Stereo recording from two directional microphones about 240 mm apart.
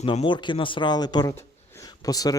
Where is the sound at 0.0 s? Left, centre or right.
Left.